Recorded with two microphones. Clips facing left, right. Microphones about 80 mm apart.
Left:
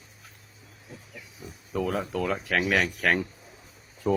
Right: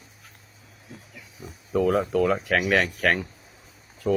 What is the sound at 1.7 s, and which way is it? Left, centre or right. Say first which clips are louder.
Speech: right 7 dB; centre.